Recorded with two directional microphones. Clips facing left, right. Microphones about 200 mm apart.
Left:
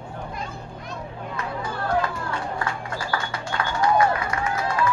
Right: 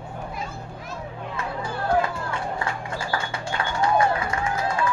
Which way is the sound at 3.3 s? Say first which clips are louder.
Even; 25° right (ahead or behind).